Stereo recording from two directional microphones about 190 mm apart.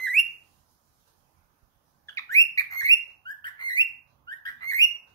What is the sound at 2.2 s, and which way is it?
Bird, 15° left (ahead or behind).